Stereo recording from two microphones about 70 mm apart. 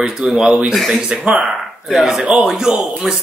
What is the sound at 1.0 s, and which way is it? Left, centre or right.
Speech, centre.